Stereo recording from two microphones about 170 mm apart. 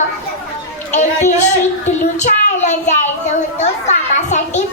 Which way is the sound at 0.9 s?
45° left (ahead or behind).